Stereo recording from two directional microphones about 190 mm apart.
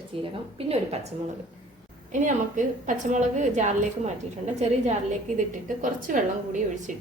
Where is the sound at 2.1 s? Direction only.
40° right (ahead or behind).